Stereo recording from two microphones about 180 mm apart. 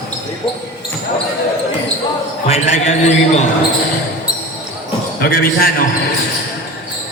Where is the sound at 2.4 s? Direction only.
40° left (ahead or behind).